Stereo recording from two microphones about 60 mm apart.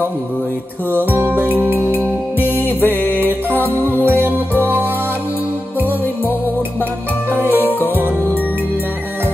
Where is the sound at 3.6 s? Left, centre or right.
Left.